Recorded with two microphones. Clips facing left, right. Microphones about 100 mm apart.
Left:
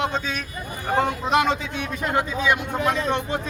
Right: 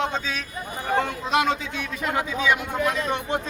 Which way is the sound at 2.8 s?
30° left (ahead or behind).